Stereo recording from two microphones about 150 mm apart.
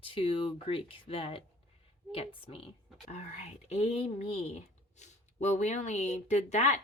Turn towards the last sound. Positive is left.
turn(degrees=50)  # may be behind; listen again after turning